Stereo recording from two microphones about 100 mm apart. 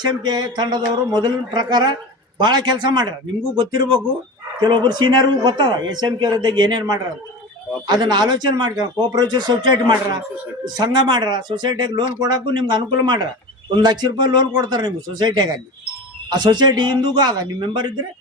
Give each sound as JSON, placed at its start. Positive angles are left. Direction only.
{"t": 0.0, "sound": "speech", "side_deg": -45}